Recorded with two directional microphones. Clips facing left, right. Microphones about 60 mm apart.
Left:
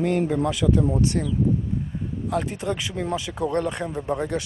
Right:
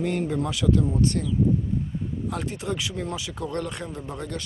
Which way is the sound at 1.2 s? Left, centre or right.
Left.